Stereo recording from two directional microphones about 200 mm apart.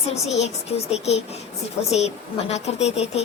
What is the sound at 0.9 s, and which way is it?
Speech, 30° left (ahead or behind).